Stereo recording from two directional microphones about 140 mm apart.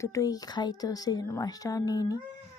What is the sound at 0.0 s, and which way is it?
A woman's voice, 20° left (ahead or behind).